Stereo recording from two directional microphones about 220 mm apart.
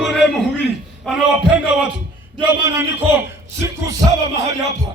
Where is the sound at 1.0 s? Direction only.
5° left (ahead or behind).